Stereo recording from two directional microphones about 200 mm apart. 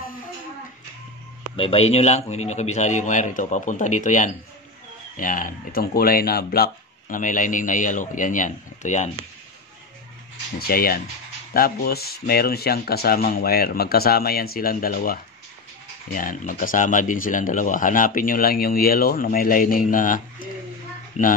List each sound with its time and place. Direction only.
1.6 s speech: 30° left (ahead or behind)
10.7 s speech: 50° left (ahead or behind)